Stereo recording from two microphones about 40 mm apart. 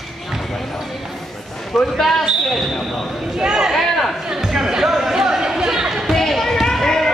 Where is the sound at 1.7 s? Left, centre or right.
Centre.